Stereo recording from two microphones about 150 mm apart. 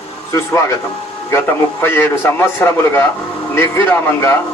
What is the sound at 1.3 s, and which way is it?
A man's voice, 15° left (ahead or behind).